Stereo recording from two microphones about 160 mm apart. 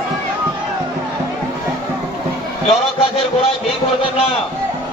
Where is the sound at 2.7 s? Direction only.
35° left (ahead or behind).